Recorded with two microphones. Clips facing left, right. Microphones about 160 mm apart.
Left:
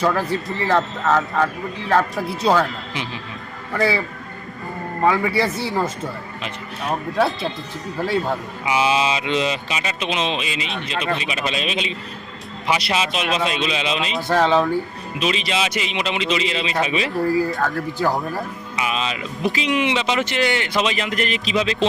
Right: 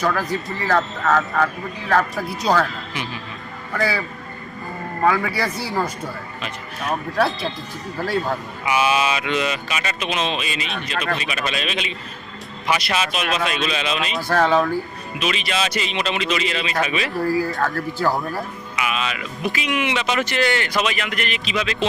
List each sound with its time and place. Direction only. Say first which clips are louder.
0.0 s speech: left 2 dB; 25° left (ahead or behind)
5.0 s speech: left 2 dB; 25° left (ahead or behind)
8.6 s speech: even; 25° left (ahead or behind)
15.6 s speech: even; 15° left (ahead or behind)
18.8 s speech: left 1 dB; 30° left (ahead or behind)